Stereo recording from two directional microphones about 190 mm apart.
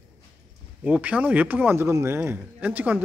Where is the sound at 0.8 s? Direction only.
5° right (ahead or behind).